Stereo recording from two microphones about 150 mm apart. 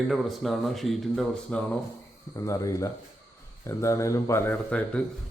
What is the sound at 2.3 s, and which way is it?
Speech, 20° left (ahead or behind).